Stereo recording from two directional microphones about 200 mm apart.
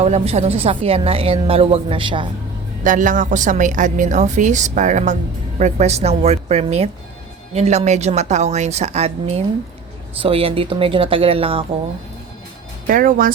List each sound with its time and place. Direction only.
0.0 s a woman's voice: 35° right (ahead or behind)
2.8 s a woman's voice: 40° right (ahead or behind)
12.9 s speech: 45° right (ahead or behind)